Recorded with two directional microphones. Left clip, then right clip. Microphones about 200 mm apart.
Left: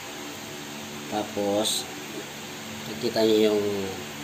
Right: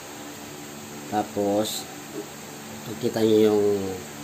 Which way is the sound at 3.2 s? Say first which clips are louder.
Right 2 dB; 45° right (ahead or behind).